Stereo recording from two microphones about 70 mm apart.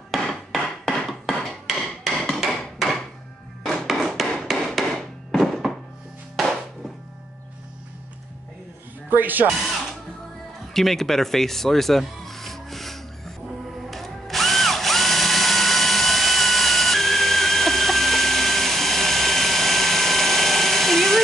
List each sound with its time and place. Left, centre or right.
0.1 s hammer: centre
3.6 s a sound: centre
6.4 s music: centre
9.1 s speech: right
10.7 s speech: centre
13.8 s drill: centre